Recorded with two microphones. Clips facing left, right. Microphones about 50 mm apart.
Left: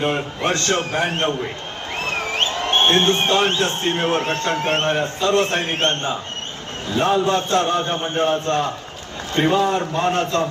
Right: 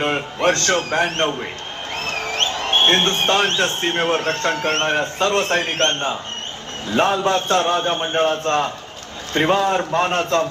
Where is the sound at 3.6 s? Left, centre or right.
Right.